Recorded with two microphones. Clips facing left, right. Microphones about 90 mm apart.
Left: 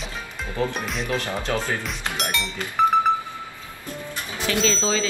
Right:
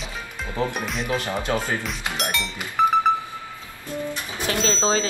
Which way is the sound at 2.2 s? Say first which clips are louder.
Even; centre (ahead or behind).